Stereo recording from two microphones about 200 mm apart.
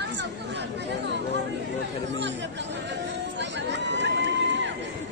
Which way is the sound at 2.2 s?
60° right (ahead or behind).